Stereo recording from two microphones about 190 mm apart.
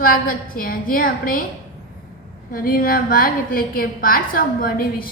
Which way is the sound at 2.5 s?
50° left (ahead or behind).